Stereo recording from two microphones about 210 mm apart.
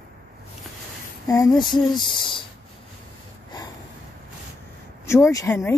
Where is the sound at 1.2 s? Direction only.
15° left (ahead or behind).